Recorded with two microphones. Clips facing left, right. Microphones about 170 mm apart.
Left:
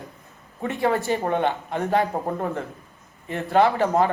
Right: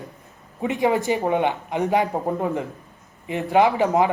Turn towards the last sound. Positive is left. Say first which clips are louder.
# right 1 dB
turn(degrees=-15)  # may be behind; listen again after turning